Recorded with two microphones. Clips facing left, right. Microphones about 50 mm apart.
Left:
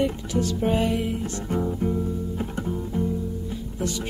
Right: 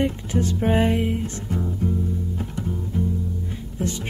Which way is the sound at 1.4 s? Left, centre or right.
Left.